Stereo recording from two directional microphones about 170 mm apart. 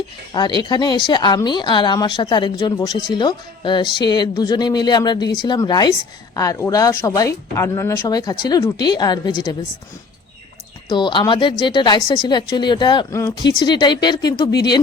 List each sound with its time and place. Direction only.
0.3 s speech: 25° left (ahead or behind)
10.8 s speech: 25° left (ahead or behind)